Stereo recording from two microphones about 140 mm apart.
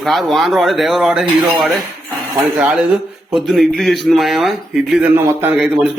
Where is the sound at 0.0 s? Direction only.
Centre (ahead or behind).